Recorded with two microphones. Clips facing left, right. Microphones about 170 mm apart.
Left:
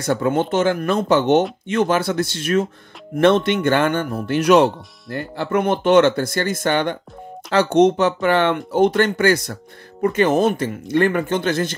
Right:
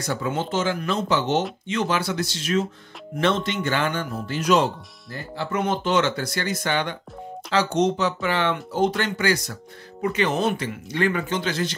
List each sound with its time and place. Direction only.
0.0 s speech: 55° left (ahead or behind)